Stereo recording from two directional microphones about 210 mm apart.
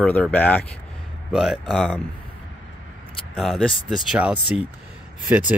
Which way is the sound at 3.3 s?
Centre (ahead or behind).